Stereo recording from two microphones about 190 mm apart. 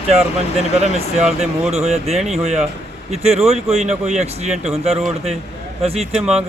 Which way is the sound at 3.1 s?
35° right (ahead or behind).